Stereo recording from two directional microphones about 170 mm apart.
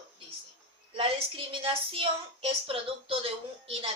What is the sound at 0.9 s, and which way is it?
A woman's voice, 35° right (ahead or behind).